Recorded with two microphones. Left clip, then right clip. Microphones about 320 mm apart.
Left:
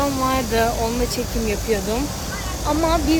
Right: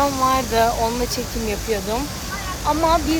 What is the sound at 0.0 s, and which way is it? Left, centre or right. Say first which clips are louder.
Speech: right 3 dB; centre.